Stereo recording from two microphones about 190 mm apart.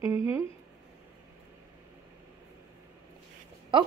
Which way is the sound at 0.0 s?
15° right (ahead or behind).